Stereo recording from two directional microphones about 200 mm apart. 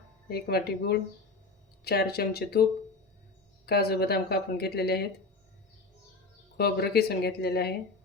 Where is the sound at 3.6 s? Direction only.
50° left (ahead or behind).